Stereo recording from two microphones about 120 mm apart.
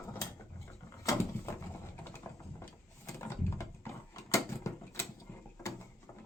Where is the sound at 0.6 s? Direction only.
25° left (ahead or behind).